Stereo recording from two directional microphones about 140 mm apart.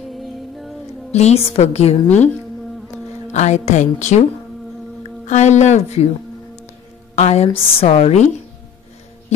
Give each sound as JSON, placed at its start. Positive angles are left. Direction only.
{"t": 0.1, "sound": "music", "side_deg": 0}
{"t": 1.1, "sound": "a woman's voice", "side_deg": 50}
{"t": 3.3, "sound": "a woman's voice", "side_deg": 55}
{"t": 7.2, "sound": "a woman's voice", "side_deg": 50}